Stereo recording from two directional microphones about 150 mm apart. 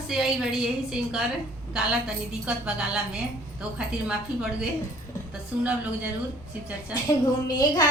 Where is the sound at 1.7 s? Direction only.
5° right (ahead or behind).